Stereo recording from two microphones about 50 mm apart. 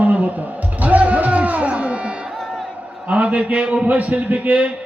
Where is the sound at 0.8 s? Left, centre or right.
Right.